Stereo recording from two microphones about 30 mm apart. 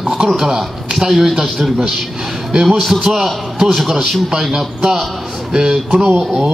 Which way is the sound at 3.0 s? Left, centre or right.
Centre.